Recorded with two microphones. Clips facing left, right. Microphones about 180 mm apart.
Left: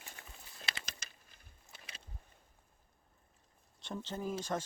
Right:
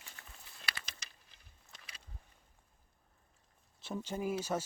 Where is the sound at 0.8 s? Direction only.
45° left (ahead or behind).